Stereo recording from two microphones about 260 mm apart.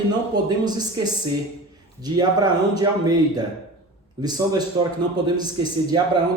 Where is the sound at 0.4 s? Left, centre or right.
Centre.